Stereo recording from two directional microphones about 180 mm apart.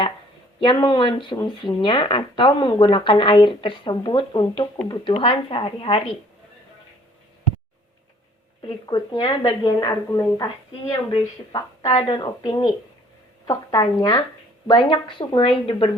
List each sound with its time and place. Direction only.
0.6 s speech: 25° left (ahead or behind)
8.6 s speech: 25° left (ahead or behind)